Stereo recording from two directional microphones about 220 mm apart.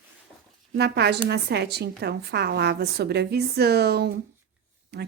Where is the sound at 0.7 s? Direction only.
50° right (ahead or behind).